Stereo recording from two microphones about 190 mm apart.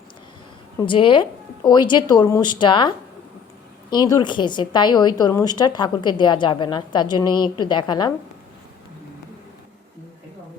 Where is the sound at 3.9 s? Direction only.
20° left (ahead or behind).